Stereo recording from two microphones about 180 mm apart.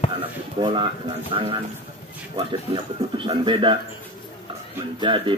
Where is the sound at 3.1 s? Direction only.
25° right (ahead or behind).